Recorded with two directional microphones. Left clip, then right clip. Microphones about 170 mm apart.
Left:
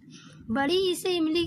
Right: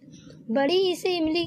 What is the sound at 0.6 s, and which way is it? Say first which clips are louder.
Speech: right 3 dB; 55° left (ahead or behind).